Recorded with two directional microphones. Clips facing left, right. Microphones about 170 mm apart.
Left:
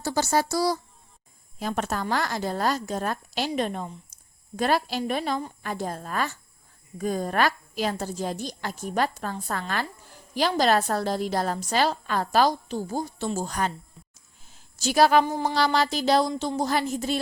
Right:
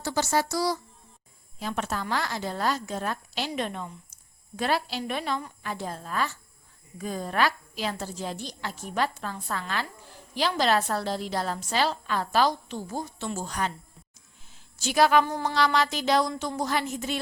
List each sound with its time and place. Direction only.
0.0 s a woman's voice: 35° left (ahead or behind)
14.5 s a sound: 40° left (ahead or behind)
15.2 s a woman's voice: 20° left (ahead or behind)
15.5 s a woman's voice: 35° left (ahead or behind)